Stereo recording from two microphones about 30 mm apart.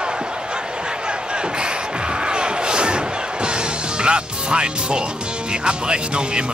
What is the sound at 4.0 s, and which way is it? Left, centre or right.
Speech, right.